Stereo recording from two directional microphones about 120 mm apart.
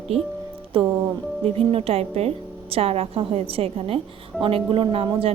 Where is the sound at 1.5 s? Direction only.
55° right (ahead or behind).